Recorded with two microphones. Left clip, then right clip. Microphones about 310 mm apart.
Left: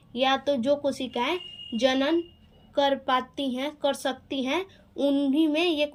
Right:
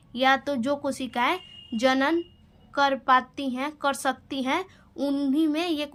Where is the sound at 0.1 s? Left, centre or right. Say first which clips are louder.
Right 1 dB; centre.